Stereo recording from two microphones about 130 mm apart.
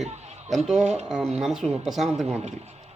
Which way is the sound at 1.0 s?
5° right (ahead or behind).